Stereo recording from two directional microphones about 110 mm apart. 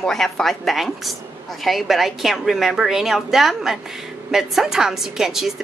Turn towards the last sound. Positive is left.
turn(degrees=-5)  # may be behind; listen again after turning